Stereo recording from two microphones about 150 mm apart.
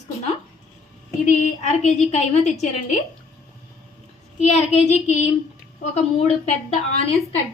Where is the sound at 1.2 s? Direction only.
50° left (ahead or behind).